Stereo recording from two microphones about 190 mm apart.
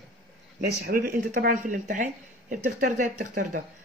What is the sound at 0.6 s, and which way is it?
Speech, 55° right (ahead or behind).